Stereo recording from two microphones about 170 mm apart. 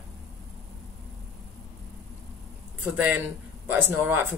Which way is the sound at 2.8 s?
10° right (ahead or behind).